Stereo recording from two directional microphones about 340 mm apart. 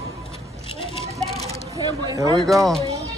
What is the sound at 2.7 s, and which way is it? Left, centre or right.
Music, centre.